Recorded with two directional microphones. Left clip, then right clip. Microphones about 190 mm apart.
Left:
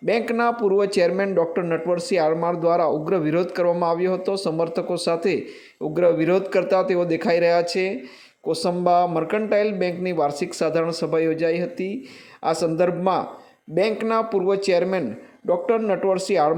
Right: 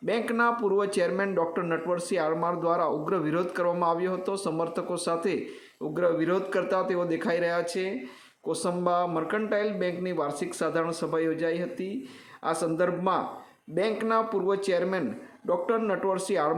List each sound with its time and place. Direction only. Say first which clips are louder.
0.0 s speech: left 5 dB; 25° left (ahead or behind)